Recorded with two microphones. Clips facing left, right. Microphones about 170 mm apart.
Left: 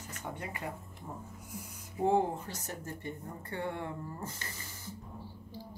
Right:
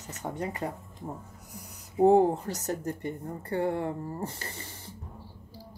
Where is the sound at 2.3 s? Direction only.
75° right (ahead or behind).